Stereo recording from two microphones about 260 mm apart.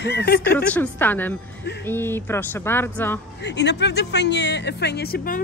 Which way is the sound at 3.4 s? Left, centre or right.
Left.